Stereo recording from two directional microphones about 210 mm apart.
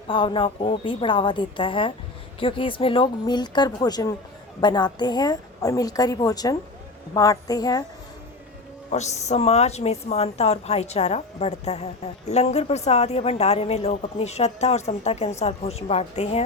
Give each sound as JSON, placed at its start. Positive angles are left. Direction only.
{"t": 0.1, "sound": "a woman's voice", "side_deg": 25}
{"t": 8.9, "sound": "a woman's voice", "side_deg": 30}